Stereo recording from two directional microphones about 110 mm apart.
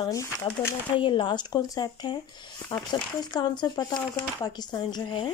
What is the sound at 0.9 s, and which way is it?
Speech, 50° left (ahead or behind).